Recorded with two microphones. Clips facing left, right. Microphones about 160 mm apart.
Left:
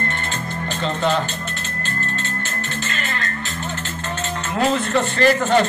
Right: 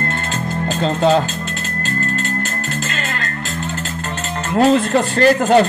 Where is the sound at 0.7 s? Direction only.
40° right (ahead or behind).